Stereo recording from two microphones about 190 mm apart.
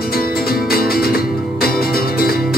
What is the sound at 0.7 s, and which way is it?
Music, 50° left (ahead or behind).